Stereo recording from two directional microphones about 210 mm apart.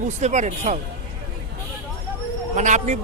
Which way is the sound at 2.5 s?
35° right (ahead or behind).